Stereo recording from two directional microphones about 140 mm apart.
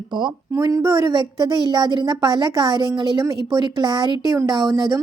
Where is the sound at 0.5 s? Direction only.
20° right (ahead or behind).